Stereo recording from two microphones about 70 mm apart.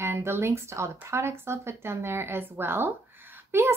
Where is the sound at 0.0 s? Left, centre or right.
Right.